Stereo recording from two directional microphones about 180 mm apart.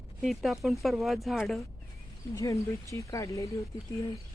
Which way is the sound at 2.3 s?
15° left (ahead or behind).